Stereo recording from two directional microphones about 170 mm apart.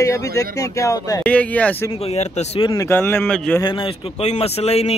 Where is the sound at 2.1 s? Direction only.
40° left (ahead or behind).